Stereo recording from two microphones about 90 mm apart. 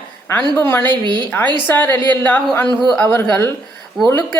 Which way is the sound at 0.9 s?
60° right (ahead or behind).